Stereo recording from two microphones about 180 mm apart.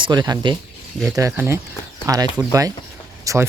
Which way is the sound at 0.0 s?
25° right (ahead or behind).